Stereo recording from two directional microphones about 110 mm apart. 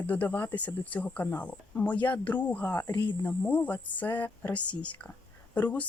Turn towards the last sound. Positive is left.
turn(degrees=15)  # may be behind; listen again after turning